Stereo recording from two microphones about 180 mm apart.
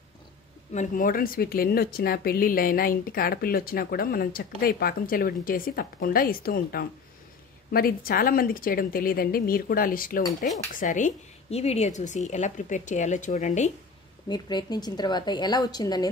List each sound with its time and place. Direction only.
0.7 s a woman's voice: 50° left (ahead or behind)
14.3 s speech: 25° left (ahead or behind)